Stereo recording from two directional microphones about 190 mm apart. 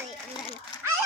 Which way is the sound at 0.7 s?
20° left (ahead or behind).